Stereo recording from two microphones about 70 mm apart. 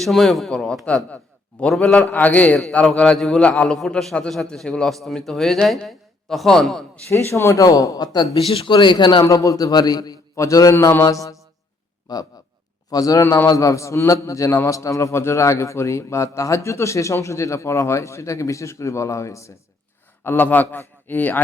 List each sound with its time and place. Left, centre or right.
0.0 s a man's voice: centre
1.1 s a sound: centre
2.1 s a man's voice: left; by 6.8 s centre
7.1 s speech: left
7.6 s a man's voice: left
9.2 s a man's voice: left
10.3 s a man's voice: left
12.1 s a man's voice: left
12.9 s a man's voice: left
20.2 s a man's voice: left